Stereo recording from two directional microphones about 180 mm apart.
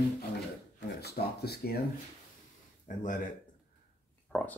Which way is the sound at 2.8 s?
45° left (ahead or behind).